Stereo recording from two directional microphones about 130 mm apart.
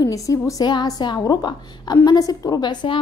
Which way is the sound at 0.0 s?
25° left (ahead or behind).